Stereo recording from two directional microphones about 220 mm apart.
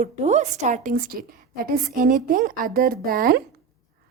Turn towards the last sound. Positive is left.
turn(degrees=-40)  # may be behind; listen again after turning